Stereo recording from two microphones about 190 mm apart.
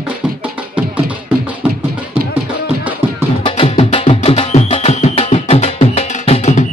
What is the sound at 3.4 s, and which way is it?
Music, 30° left (ahead or behind).